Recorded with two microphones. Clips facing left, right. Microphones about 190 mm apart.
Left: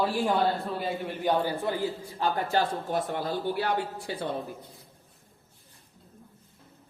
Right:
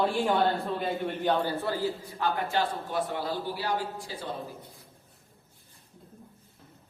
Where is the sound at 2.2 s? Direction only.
45° left (ahead or behind); by 4.1 s 60° left (ahead or behind).